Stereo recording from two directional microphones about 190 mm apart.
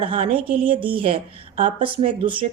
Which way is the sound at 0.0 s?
30° right (ahead or behind).